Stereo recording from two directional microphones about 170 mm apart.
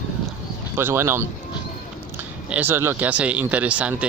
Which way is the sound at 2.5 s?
10° right (ahead or behind).